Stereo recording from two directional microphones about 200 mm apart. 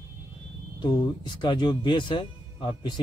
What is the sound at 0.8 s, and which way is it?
Speech, 20° left (ahead or behind).